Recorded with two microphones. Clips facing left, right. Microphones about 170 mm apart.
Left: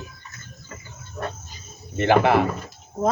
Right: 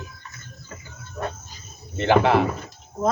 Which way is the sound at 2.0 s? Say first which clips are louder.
Even; 55° left (ahead or behind).